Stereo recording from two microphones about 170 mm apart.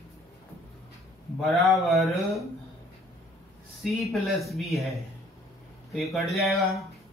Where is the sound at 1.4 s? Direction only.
Centre (ahead or behind).